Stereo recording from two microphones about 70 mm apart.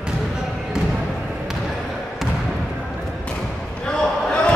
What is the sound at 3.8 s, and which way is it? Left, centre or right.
Basketball bounce, centre.